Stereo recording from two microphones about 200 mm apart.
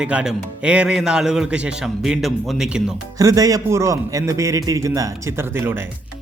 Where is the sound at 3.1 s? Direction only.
15° right (ahead or behind).